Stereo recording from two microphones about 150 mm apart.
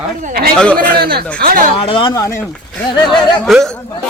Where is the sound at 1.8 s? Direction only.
35° left (ahead or behind).